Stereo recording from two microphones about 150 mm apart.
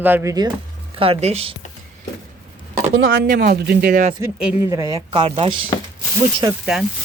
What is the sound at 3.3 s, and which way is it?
Speech, 85° right.